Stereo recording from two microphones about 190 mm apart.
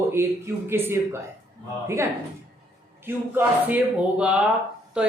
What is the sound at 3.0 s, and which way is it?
Speech, 10° right (ahead or behind).